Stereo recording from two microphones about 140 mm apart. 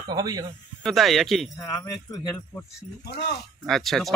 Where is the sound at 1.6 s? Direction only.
25° left (ahead or behind).